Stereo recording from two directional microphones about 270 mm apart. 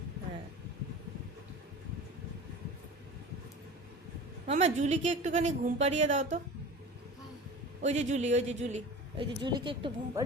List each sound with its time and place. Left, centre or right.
4.4 s a man's voice: right
7.8 s a man's voice: right